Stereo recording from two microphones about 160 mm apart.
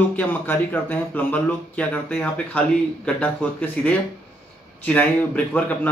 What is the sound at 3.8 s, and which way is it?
A man's voice, 10° left (ahead or behind).